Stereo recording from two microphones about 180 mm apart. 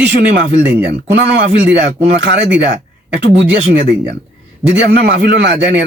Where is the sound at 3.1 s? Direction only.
75° right (ahead or behind).